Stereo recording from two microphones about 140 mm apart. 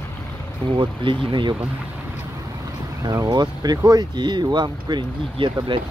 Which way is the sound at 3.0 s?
30° right (ahead or behind).